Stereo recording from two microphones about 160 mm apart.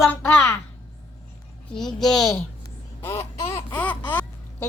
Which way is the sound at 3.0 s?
15° left (ahead or behind).